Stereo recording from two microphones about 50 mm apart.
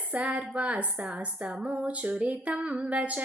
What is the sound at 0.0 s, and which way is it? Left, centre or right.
A woman's voice, right.